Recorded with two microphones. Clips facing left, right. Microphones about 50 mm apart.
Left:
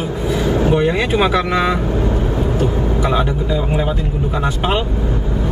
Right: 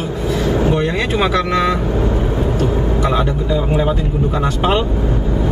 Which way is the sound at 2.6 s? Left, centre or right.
Centre.